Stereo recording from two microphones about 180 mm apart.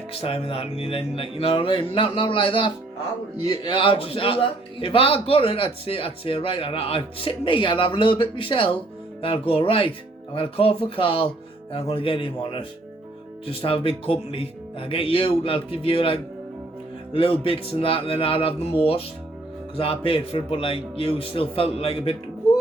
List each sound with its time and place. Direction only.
0.1 s a man's voice: 30° left (ahead or behind)